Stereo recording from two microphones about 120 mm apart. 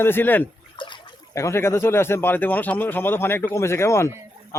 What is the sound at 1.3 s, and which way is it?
Speech, 25° left (ahead or behind).